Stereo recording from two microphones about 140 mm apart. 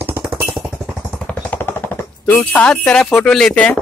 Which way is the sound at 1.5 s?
15° left (ahead or behind).